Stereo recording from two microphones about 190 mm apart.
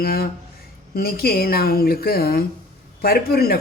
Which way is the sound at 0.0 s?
55° left (ahead or behind).